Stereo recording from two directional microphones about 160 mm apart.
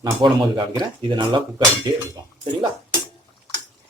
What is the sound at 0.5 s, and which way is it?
Speech, 30° right (ahead or behind).